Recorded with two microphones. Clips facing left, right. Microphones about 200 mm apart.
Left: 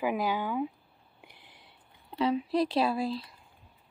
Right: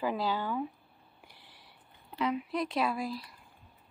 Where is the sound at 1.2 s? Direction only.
20° left (ahead or behind).